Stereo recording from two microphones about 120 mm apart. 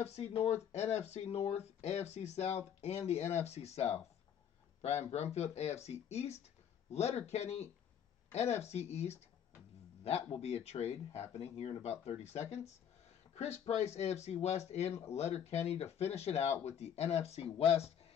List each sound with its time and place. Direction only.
0.0 s speech: 60° left (ahead or behind)
5.1 s speech: 65° left (ahead or behind)